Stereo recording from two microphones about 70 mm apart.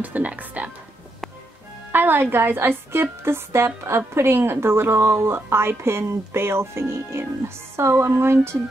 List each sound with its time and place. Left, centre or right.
0.0 s a woman's voice: right
1.9 s a woman's voice: right